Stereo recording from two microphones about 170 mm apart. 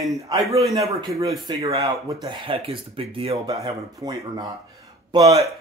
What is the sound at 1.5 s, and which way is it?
Speech, 25° right (ahead or behind).